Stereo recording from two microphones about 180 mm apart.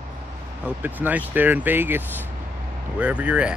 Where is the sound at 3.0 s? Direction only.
5° right (ahead or behind).